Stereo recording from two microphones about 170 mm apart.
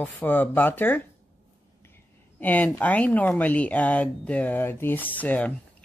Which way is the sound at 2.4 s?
10° left (ahead or behind).